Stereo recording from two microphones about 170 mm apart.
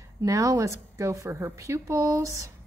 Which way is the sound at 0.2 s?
20° right (ahead or behind).